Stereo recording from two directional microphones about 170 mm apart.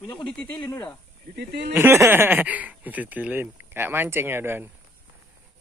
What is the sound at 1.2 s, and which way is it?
Speech, 70° right (ahead or behind).